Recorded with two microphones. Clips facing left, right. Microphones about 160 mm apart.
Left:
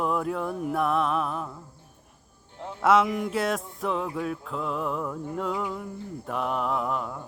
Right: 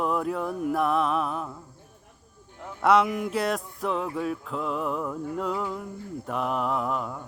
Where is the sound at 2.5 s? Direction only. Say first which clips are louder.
Left 3 dB; 25° left (ahead or behind).